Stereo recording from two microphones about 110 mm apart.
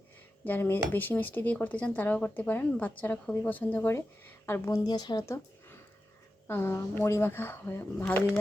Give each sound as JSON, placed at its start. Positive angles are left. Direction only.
{"t": 0.4, "sound": "speech", "side_deg": 20}
{"t": 5.2, "sound": "speech", "side_deg": 25}
{"t": 8.0, "sound": "speech", "side_deg": 10}